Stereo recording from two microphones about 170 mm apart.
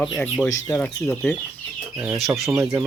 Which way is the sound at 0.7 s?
5° left (ahead or behind).